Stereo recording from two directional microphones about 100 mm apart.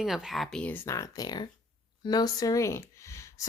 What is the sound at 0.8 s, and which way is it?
Speech, 35° left (ahead or behind).